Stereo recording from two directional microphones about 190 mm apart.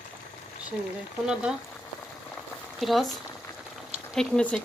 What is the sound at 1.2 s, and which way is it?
Speech, 5° right (ahead or behind).